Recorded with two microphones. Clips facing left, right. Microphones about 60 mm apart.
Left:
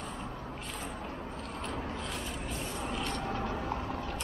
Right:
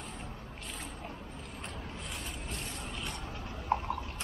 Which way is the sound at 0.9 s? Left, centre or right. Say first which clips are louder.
Left 4 dB; left.